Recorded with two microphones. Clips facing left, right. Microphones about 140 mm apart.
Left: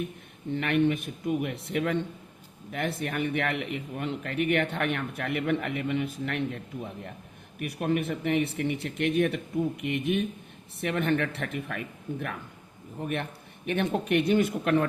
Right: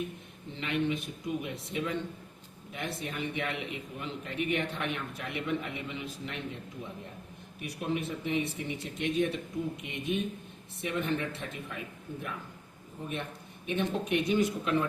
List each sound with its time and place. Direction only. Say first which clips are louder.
0.5 s speech: left 6 dB; 60° left (ahead or behind)
7.6 s speech: left 5 dB; 60° left (ahead or behind)
13.7 s speech: left 4 dB; 65° left (ahead or behind)